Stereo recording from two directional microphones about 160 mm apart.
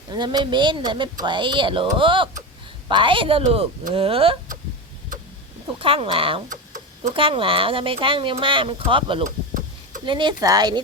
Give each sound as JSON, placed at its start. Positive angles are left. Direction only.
{"t": 0.1, "sound": "speech", "side_deg": -25}
{"t": 5.8, "sound": "speech", "side_deg": -35}
{"t": 9.2, "sound": "a sound", "side_deg": -55}
{"t": 10.1, "sound": "speech", "side_deg": -30}